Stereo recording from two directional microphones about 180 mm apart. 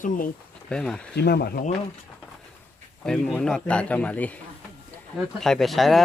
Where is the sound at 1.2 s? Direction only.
60° left (ahead or behind).